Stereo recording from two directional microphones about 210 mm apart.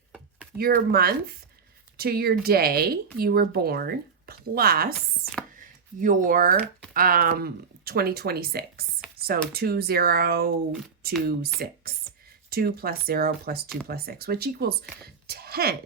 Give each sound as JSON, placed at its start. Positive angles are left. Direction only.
{"t": 0.5, "sound": "speech", "side_deg": -45}
{"t": 6.0, "sound": "speech", "side_deg": -40}
{"t": 9.1, "sound": "a sound", "side_deg": -45}
{"t": 9.5, "sound": "speech", "side_deg": -45}
{"t": 11.6, "sound": "speech", "side_deg": -45}
{"t": 15.0, "sound": "a sound", "side_deg": -45}